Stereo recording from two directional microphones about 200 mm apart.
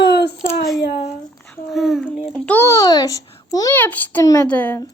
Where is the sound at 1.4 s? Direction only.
5° left (ahead or behind).